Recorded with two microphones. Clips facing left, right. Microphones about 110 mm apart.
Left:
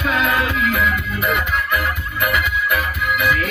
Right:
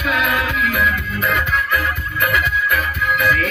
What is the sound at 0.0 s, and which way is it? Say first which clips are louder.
Music: left 1 dB; 25° left (ahead or behind).